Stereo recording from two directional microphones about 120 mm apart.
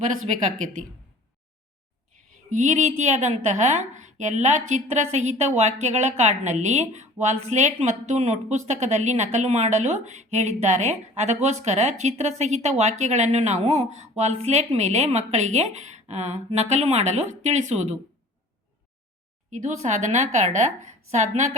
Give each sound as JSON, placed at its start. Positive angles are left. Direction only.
{"t": 2.5, "sound": "a woman's voice", "side_deg": -90}
{"t": 19.5, "sound": "a woman's voice", "side_deg": -85}